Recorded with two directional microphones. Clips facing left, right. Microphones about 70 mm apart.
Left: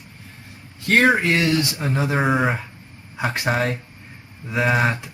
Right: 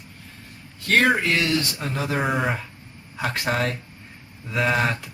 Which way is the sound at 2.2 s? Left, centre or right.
Centre.